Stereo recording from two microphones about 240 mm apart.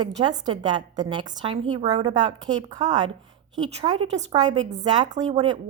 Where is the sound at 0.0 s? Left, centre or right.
Centre.